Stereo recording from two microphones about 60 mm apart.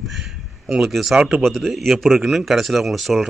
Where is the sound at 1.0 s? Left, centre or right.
Centre.